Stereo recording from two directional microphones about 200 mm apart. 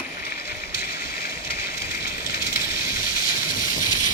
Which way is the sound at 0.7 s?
50° left (ahead or behind).